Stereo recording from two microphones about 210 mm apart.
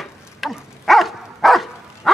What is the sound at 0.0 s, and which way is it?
Dog, centre (ahead or behind).